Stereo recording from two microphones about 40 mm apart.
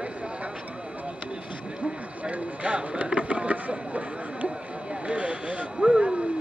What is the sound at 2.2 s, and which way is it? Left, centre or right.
Speech, right.